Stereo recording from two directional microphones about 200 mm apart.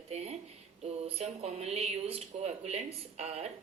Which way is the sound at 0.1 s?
35° right (ahead or behind).